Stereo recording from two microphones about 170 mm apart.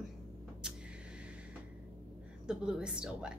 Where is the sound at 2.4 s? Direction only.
5° right (ahead or behind).